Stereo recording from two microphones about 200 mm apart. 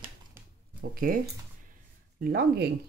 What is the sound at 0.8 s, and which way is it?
Speech, 45° right (ahead or behind).